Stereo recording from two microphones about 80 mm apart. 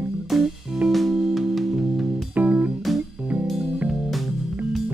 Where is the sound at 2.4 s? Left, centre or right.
Centre.